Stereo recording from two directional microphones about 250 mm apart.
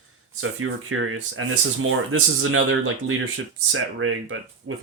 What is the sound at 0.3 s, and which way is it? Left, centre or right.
Speech, right.